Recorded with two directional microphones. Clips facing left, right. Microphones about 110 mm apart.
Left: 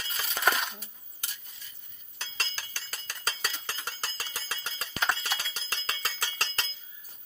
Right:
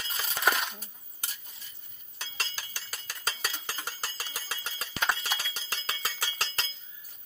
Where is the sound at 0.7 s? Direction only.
40° right (ahead or behind).